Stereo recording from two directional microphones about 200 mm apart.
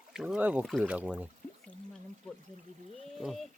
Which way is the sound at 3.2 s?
Centre (ahead or behind).